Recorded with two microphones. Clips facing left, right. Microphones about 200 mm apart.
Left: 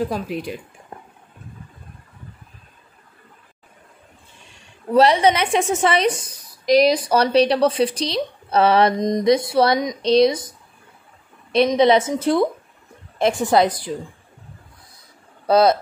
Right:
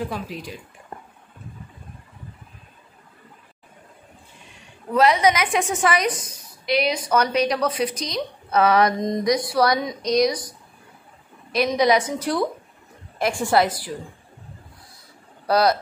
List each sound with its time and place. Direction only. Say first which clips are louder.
0.3 s speech: left 7 dB; 60° left (ahead or behind)
4.9 s a woman's voice: left 3 dB; 30° left (ahead or behind)
11.7 s a woman's voice: left 2 dB; 25° left (ahead or behind)
15.4 s speech: left 4 dB; 25° left (ahead or behind)